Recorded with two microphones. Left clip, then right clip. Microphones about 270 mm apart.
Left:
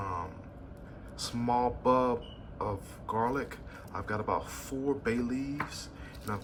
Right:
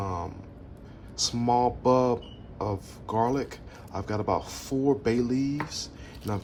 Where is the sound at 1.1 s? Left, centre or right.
Centre.